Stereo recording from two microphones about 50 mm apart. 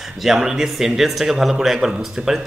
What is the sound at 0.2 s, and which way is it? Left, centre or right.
A man's voice, centre.